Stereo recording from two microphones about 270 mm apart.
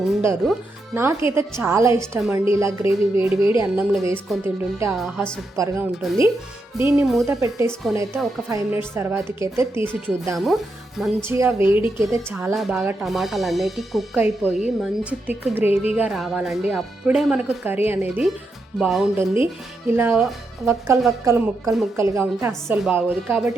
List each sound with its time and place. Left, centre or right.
0.1 s speech: centre
15.7 s a woman's voice: left
16.0 s speech: centre